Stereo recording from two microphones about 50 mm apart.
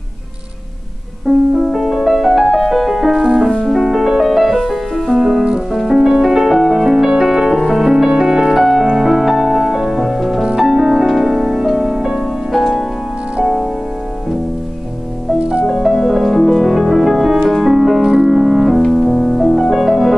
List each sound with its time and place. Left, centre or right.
1.3 s music: centre
3.3 s music: centre
12.5 s music: centre
15.6 s music: centre